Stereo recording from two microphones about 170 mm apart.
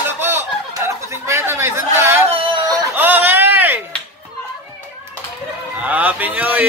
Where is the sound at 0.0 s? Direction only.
15° right (ahead or behind).